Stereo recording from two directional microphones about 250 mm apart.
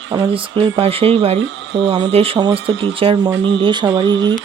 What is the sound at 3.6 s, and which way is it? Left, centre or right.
Speech, centre.